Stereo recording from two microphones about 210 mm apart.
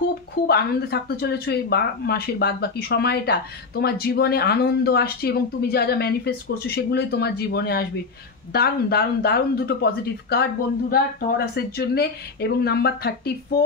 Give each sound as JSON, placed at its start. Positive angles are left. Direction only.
{"t": 0.5, "sound": "speech", "side_deg": 50}